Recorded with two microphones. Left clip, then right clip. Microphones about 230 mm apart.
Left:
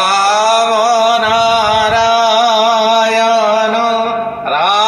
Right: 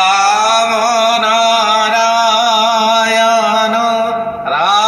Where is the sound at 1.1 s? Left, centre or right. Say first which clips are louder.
Even; centre.